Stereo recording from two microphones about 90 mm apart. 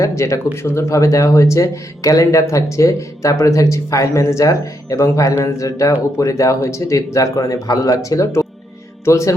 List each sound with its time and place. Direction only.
0.2 s speech: 30° left (ahead or behind)